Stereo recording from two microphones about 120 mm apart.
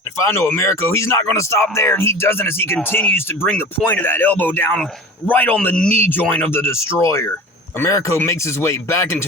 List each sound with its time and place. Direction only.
0.3 s speech: 15° left (ahead or behind)